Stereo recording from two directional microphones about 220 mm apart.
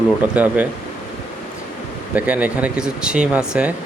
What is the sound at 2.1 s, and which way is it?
Speech, 5° right (ahead or behind).